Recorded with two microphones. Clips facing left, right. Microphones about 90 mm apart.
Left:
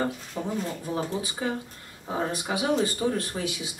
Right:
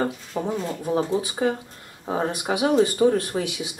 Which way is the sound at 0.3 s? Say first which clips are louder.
Right 5 dB; 30° right (ahead or behind).